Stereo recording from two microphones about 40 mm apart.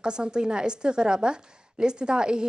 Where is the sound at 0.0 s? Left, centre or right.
Right.